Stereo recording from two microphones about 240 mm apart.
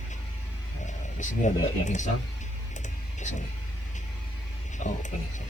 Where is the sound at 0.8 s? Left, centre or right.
Left.